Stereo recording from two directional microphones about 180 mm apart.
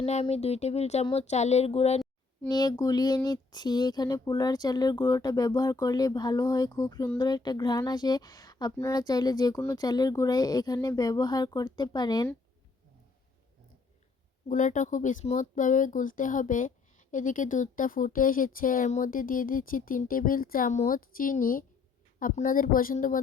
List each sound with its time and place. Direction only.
0.0 s speech: 35° left (ahead or behind)
2.5 s speech: 20° left (ahead or behind)
14.4 s speech: 45° left (ahead or behind)